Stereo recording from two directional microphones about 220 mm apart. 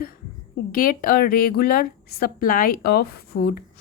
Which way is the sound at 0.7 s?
40° left (ahead or behind).